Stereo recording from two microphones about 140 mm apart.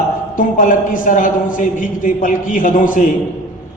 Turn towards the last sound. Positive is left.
turn(degrees=70)  # may be behind; listen again after turning